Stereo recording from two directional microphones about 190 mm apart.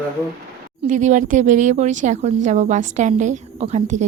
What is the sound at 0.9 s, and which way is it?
Speech, 40° right (ahead or behind).